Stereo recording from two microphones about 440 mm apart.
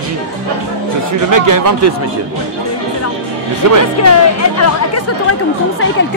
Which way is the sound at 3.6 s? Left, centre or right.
Right.